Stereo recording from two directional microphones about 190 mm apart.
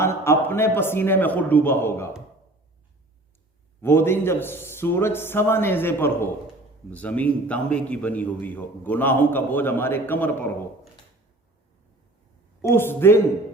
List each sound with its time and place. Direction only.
0.0 s a man's voice: 15° left (ahead or behind)
3.8 s a man's voice: 10° left (ahead or behind)
12.6 s a man's voice: 10° left (ahead or behind)